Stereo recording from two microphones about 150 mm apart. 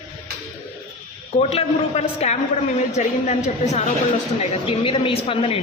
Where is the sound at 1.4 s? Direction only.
45° left (ahead or behind).